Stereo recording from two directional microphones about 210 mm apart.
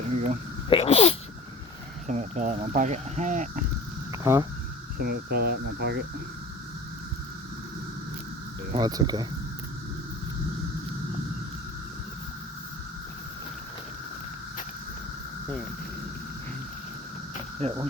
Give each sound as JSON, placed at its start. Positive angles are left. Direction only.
{"t": 0.7, "sound": "sneeze", "side_deg": 30}
{"t": 2.0, "sound": "speech", "side_deg": -35}
{"t": 4.1, "sound": "a sound", "side_deg": -15}
{"t": 4.9, "sound": "speech", "side_deg": -45}
{"t": 8.7, "sound": "speech", "side_deg": -20}
{"t": 17.6, "sound": "speech", "side_deg": -30}